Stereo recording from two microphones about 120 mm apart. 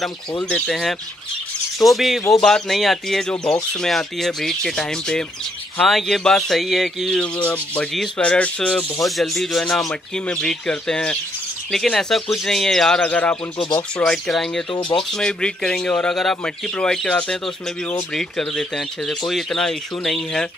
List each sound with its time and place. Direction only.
0.5 s speech: 5° left (ahead or behind)
13.6 s speech: 40° left (ahead or behind)
13.9 s speech: 10° left (ahead or behind)
14.7 s speech: 40° left (ahead or behind)
15.1 s speech: 5° left (ahead or behind)